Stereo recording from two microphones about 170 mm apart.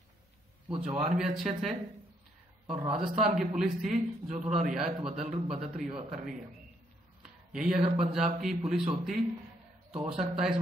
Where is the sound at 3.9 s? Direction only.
45° right (ahead or behind).